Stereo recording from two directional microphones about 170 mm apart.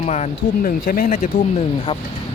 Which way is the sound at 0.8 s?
55° left (ahead or behind).